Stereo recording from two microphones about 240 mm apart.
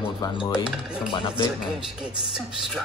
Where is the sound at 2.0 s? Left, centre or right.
Centre.